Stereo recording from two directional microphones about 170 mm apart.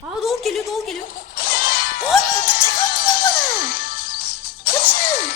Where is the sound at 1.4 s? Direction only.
55° left (ahead or behind).